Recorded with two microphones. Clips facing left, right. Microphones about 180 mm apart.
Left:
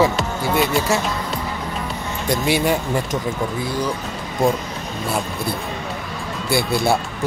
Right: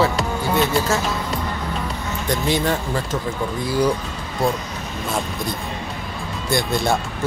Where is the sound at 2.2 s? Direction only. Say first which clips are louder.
Left 2 dB; 10° left (ahead or behind).